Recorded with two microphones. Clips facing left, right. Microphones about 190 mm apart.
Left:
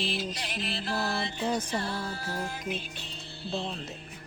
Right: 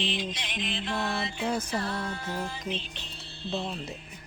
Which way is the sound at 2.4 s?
10° left (ahead or behind).